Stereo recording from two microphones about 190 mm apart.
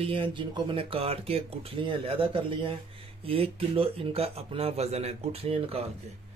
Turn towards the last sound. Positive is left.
turn(degrees=-30)  # may be behind; listen again after turning